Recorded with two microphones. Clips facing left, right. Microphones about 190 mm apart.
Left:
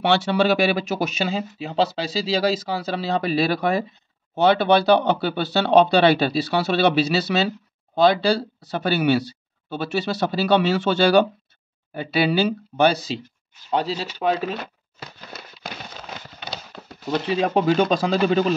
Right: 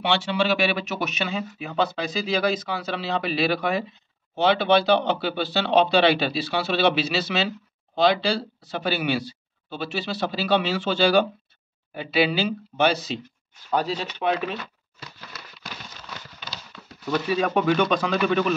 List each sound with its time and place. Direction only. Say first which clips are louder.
0.1 s speech: left 4 dB; 40° left (ahead or behind)
14.6 s a sound: left 4 dB; 60° left (ahead or behind)
17.3 s speech: left 2 dB; 25° left (ahead or behind)